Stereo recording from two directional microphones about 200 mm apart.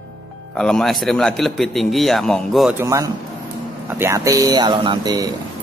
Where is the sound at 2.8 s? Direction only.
15° right (ahead or behind).